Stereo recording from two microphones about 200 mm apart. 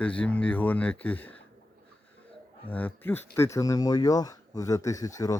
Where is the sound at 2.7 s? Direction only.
10° left (ahead or behind).